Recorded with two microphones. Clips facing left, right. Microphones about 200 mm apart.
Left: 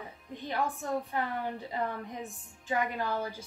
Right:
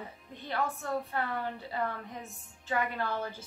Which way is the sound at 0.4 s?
15° left (ahead or behind).